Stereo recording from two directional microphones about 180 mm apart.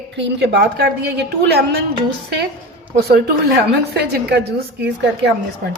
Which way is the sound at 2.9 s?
60° right (ahead or behind).